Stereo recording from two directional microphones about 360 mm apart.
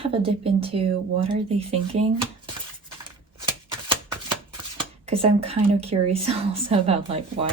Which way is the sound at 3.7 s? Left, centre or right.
Centre.